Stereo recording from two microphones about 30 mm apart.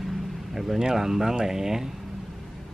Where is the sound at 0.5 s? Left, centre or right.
Centre.